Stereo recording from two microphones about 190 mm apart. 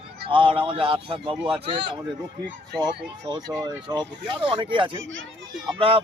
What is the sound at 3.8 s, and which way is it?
Speech, 25° right (ahead or behind).